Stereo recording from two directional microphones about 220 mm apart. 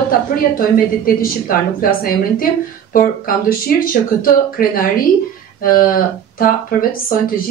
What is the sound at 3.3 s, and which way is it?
A woman's voice, 40° left (ahead or behind).